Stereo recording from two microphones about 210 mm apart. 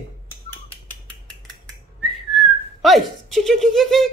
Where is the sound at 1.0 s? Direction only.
5° left (ahead or behind).